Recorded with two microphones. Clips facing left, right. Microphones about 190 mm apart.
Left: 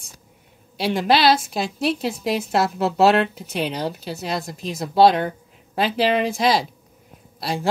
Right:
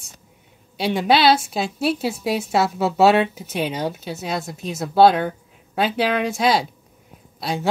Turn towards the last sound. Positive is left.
turn(degrees=0)  # may be behind; listen again after turning